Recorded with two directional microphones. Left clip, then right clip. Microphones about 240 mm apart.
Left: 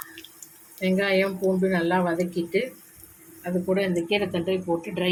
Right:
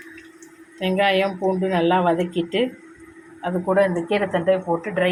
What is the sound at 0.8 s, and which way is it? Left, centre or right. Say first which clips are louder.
Speech: right 4 dB; centre.